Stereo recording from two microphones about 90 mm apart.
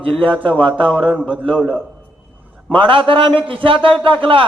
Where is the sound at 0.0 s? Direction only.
75° right (ahead or behind).